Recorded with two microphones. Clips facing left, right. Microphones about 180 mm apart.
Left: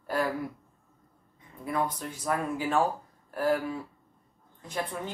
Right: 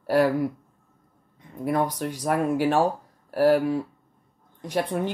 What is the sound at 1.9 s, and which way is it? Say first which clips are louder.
Speech: right 9 dB; 80° right.